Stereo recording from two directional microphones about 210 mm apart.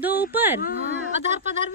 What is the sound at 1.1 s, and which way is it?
Speech, 35° right (ahead or behind).